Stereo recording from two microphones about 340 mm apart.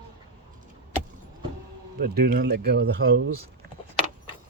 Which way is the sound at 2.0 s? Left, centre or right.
Right.